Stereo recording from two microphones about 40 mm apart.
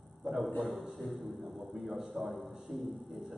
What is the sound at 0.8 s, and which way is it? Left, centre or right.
A man's voice, centre.